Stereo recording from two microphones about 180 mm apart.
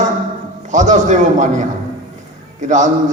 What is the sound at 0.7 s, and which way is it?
A man's voice, 45° right (ahead or behind).